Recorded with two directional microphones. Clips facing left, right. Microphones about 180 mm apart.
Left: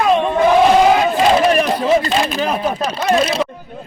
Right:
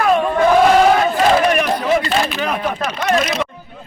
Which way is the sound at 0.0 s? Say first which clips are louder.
Left 1 dB; 20° left (ahead or behind).